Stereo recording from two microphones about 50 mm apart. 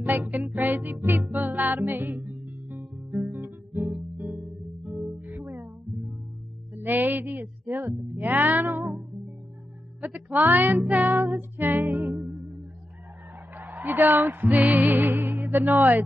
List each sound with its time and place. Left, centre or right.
0.0 s music: right
2.8 s guitar: centre
3.3 s guitar: right
4.4 s music: centre
6.8 s a sound: right
8.2 s music: right
10.0 s music: right
12.2 s music: centre
13.6 s music: right